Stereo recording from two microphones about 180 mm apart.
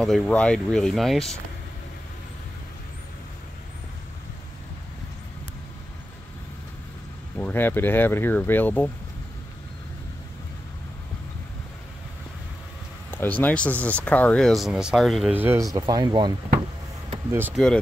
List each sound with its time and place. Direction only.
0.0 s speech: 5° left (ahead or behind)
7.3 s speech: 10° left (ahead or behind)
13.1 s speech: 10° left (ahead or behind)
15.3 s speech: 15° right (ahead or behind)
17.3 s speech: 10° right (ahead or behind)